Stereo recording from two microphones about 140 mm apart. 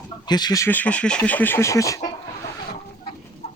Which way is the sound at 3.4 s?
55° left (ahead or behind).